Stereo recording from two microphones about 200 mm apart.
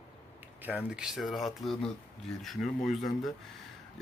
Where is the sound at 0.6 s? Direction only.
10° right (ahead or behind).